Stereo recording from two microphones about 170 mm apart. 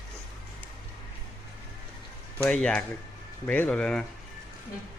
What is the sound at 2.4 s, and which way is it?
A man's voice, 5° left (ahead or behind).